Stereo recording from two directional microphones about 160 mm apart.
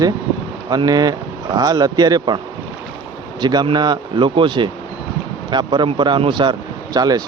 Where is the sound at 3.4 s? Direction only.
25° right (ahead or behind).